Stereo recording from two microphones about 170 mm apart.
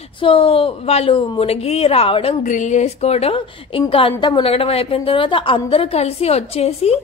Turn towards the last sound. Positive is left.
turn(degrees=40)  # may be behind; listen again after turning